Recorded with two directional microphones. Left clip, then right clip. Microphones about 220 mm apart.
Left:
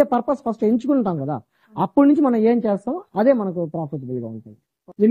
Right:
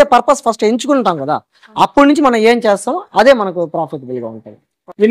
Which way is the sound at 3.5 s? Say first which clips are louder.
Right 9 dB; 30° right (ahead or behind).